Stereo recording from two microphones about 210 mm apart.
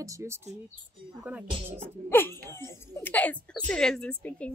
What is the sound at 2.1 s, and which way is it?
A woman's voice, 10° left (ahead or behind).